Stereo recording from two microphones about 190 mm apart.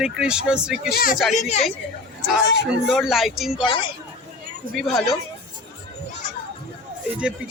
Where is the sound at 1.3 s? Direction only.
35° left (ahead or behind).